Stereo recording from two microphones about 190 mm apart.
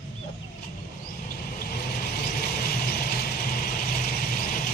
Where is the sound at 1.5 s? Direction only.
50° left (ahead or behind).